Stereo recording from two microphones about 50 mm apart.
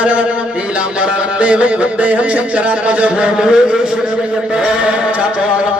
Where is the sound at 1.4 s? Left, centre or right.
Right.